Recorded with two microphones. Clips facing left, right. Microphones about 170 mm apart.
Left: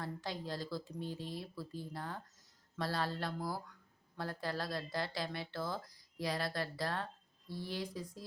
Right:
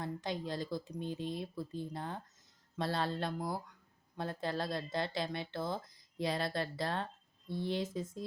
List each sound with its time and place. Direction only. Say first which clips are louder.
0.0 s speech: right 3 dB; 20° right (ahead or behind)